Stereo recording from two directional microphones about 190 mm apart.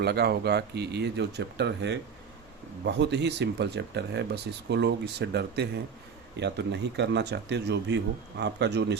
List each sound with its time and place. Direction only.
0.0 s speech: 60° right (ahead or behind)